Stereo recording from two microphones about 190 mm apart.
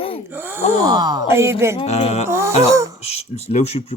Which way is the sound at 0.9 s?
20° right (ahead or behind).